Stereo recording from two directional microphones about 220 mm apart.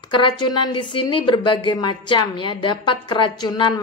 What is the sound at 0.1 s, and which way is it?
Speech, 20° left (ahead or behind).